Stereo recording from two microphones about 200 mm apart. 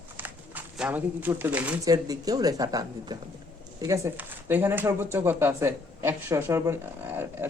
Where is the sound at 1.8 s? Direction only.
20° right (ahead or behind).